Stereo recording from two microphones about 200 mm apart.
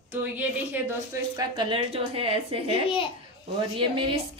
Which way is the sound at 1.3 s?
25° right (ahead or behind).